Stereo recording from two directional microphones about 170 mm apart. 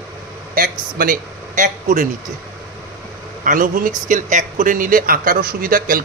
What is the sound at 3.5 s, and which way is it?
Speech, 50° right (ahead or behind).